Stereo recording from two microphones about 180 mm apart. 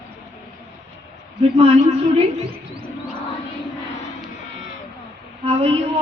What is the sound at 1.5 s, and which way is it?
Speech, 35° right (ahead or behind).